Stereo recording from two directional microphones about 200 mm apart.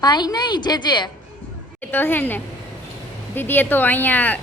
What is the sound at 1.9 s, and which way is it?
Speech, 10° left (ahead or behind).